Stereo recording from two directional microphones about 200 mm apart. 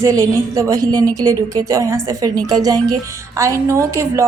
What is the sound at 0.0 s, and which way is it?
A woman's voice, 15° right (ahead or behind).